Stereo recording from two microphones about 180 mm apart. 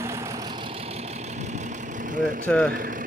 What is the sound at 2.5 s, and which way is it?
Speech, 5° left (ahead or behind).